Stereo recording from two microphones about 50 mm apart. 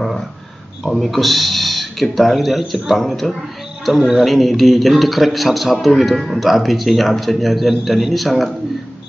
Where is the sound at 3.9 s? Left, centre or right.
Centre.